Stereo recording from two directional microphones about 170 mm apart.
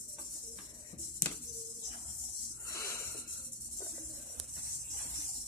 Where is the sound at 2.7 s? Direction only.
15° left (ahead or behind).